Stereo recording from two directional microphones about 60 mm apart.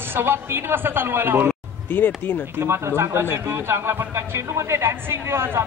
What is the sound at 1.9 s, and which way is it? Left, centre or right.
Speech, left.